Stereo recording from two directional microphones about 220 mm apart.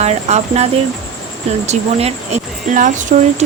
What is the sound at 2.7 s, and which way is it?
Speech, 35° right (ahead or behind).